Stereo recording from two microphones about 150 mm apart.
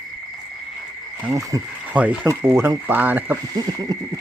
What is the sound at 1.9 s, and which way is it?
Speech, 10° right (ahead or behind).